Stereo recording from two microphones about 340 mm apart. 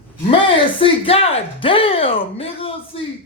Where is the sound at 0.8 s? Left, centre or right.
Centre.